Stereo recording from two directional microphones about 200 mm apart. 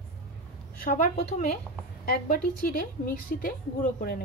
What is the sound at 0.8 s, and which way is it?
A woman's voice, 40° left (ahead or behind).